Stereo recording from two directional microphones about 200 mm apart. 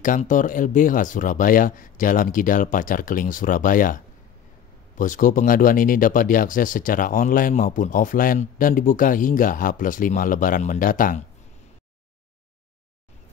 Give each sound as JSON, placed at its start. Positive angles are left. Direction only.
{"t": 0.0, "sound": "speech", "side_deg": 40}